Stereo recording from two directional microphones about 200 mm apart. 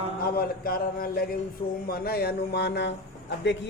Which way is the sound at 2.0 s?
50° left (ahead or behind).